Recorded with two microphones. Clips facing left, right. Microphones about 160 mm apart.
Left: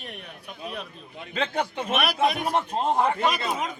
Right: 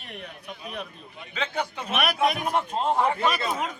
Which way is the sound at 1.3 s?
50° left (ahead or behind).